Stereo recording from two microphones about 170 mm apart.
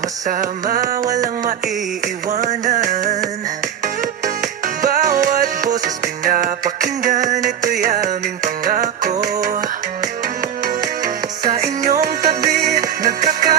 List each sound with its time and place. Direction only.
0.3 s music: 55° right (ahead or behind)